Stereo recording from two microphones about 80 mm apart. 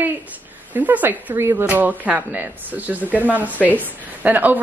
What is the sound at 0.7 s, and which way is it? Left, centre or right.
A woman's voice, right.